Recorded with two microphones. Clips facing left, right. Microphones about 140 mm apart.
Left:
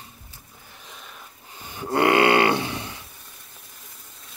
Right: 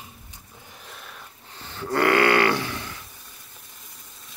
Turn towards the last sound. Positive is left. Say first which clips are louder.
# left 2 dB
turn(degrees=20)  # may be behind; listen again after turning